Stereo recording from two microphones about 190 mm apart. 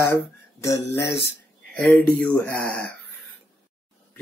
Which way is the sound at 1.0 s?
65° left (ahead or behind).